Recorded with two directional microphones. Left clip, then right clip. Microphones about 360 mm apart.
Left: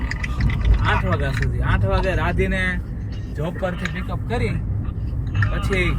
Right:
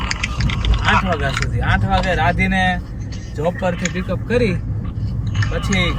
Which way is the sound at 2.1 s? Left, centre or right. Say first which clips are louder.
Right 6 dB; left.